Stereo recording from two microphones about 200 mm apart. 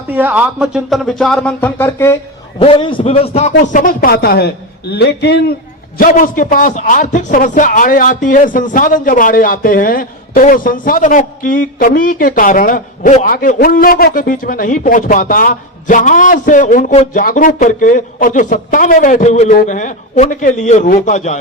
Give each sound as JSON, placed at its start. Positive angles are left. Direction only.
{"t": 0.1, "sound": "speech", "side_deg": -10}
{"t": 2.6, "sound": "a man's voice", "side_deg": 25}
{"t": 3.7, "sound": "a man's voice", "side_deg": 40}
{"t": 6.0, "sound": "a man's voice", "side_deg": 40}